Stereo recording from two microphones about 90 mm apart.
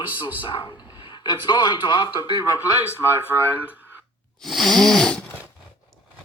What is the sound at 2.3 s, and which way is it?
Speech, 35° right (ahead or behind).